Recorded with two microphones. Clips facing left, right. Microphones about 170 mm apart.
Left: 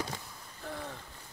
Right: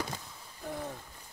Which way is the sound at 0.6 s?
15° right (ahead or behind).